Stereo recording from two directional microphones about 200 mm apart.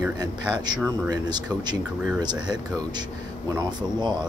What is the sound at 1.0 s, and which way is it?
Speech, 20° right (ahead or behind).